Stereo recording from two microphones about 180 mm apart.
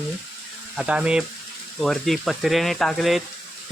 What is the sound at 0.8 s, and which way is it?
Speech, 5° right (ahead or behind).